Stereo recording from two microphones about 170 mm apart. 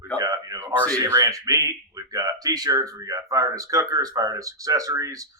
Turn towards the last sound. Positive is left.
turn(degrees=-20)  # may be behind; listen again after turning